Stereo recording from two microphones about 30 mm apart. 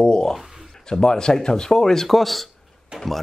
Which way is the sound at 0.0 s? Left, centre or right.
Left.